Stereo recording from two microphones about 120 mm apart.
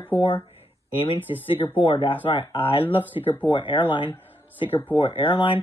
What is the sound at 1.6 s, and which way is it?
Speech, 50° left (ahead or behind).